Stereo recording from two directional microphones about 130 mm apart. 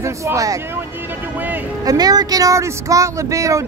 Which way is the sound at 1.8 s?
30° right (ahead or behind).